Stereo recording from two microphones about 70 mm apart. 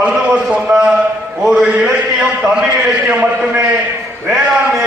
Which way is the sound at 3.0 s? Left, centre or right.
Centre.